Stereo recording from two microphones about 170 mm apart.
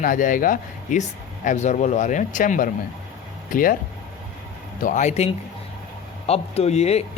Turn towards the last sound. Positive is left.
turn(degrees=40)  # may be behind; listen again after turning